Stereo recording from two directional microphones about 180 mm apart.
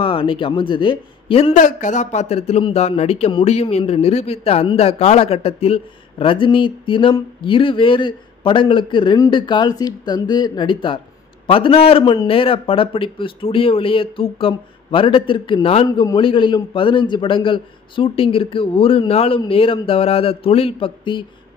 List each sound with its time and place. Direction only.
0.0 s a man's voice: 30° left (ahead or behind)
1.6 s speech: 45° left (ahead or behind); by 21.3 s 25° left (ahead or behind)